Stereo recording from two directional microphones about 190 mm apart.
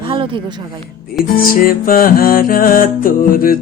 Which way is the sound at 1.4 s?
50° left (ahead or behind).